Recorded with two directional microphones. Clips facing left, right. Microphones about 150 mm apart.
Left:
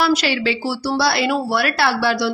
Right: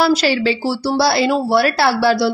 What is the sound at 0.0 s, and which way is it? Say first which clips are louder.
Speech: right 3 dB; 35° right (ahead or behind).